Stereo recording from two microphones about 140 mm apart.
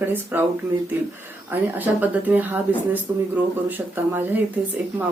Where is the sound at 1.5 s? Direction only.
10° right (ahead or behind).